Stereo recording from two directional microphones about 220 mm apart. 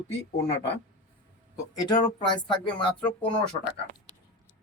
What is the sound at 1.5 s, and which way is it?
Speech, 15° left (ahead or behind).